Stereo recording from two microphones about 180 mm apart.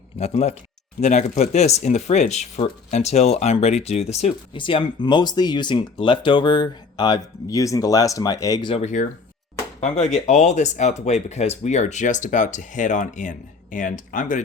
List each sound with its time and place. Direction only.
0.2 s speech: 35° left (ahead or behind)
8.8 s speech: 40° left (ahead or behind)